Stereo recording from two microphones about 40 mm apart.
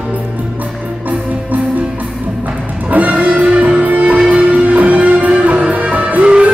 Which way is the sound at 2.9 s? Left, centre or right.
Right.